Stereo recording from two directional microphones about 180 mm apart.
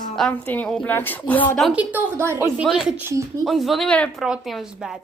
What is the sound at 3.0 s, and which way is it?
Speech, 15° right (ahead or behind).